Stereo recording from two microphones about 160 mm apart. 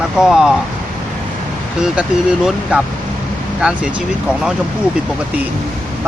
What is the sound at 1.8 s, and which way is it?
Speech, 5° right (ahead or behind).